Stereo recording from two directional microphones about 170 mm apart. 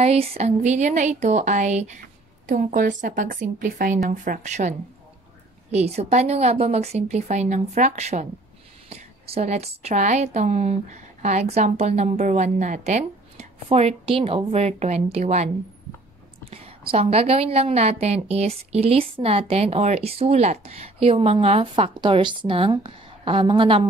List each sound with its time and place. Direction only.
0.0 s a woman's voice: 35° right (ahead or behind)